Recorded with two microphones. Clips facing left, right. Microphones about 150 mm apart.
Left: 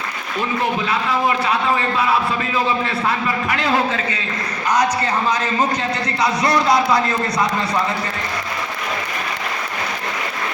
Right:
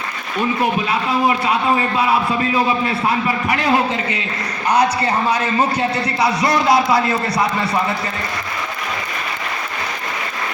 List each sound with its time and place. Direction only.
0.6 s a man's voice: 15° right (ahead or behind)
2.8 s a man's voice: 20° right (ahead or behind)